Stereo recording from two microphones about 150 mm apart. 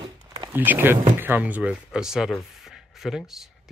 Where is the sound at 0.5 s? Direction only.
15° right (ahead or behind).